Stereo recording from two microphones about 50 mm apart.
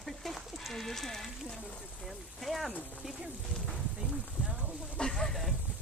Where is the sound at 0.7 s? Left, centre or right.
Centre.